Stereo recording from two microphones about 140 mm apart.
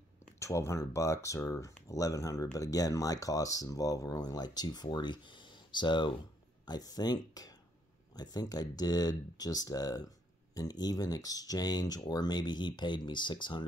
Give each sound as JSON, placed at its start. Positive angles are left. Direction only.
{"t": 0.4, "sound": "speech", "side_deg": 20}